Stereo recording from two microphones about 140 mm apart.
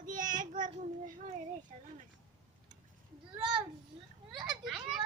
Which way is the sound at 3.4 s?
35° right (ahead or behind).